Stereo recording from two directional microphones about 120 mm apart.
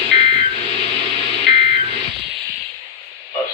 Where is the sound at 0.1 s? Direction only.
45° right (ahead or behind).